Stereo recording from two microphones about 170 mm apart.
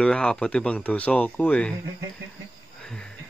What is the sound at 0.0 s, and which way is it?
Speech, 5° left (ahead or behind).